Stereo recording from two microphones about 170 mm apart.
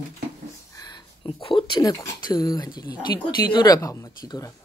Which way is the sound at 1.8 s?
20° left (ahead or behind).